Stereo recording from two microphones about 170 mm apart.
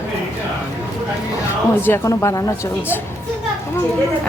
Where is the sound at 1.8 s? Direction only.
15° left (ahead or behind).